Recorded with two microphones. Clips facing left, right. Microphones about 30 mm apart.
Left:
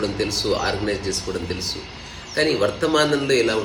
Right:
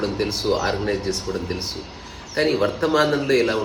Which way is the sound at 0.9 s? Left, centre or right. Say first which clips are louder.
Right 1 dB; left.